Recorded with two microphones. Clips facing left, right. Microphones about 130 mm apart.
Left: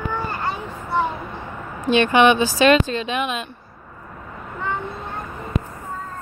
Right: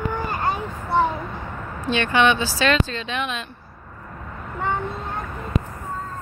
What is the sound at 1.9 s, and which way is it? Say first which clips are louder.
Speech: left 4 dB; 15° left (ahead or behind).